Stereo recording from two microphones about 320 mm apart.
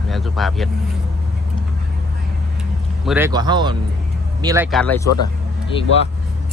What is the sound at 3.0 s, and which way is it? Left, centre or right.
A man's voice, centre.